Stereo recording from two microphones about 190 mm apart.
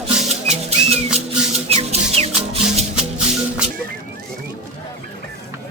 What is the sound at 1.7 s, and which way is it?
Music, 35° right (ahead or behind).